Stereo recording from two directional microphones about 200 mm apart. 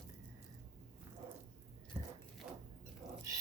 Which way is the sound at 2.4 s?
5° right (ahead or behind).